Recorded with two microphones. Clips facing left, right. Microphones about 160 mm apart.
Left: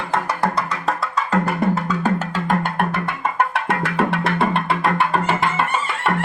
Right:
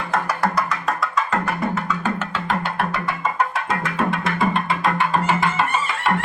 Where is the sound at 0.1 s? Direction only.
30° left (ahead or behind); by 5.5 s 65° left (ahead or behind).